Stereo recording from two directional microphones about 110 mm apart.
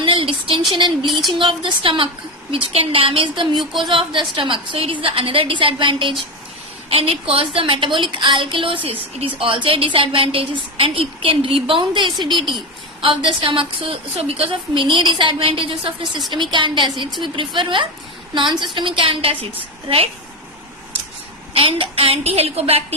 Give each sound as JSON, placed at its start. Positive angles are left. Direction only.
{"t": 0.0, "sound": "a sound", "side_deg": -50}
{"t": 1.4, "sound": "a woman's voice", "side_deg": -50}
{"t": 6.9, "sound": "a woman's voice", "side_deg": -60}
{"t": 21.5, "sound": "a woman's voice", "side_deg": -55}